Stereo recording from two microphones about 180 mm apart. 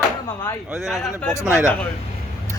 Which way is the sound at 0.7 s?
Centre (ahead or behind).